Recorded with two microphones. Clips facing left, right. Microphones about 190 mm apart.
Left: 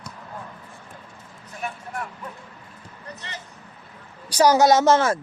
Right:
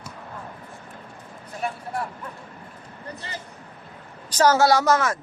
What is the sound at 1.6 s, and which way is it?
Vehicle, 30° right (ahead or behind).